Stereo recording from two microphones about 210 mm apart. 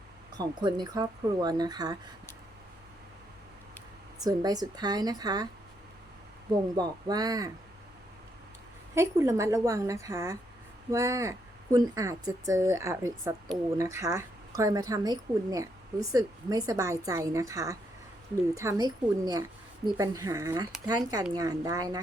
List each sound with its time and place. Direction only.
0.3 s speech: 20° right (ahead or behind)
4.2 s speech: 20° right (ahead or behind)
6.7 s speech: 20° right (ahead or behind)
9.0 s speech: 15° right (ahead or behind)